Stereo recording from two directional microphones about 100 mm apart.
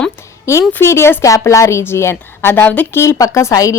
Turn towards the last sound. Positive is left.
turn(degrees=30)  # may be behind; listen again after turning